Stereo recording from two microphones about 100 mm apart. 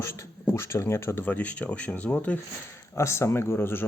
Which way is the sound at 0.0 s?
25° left (ahead or behind).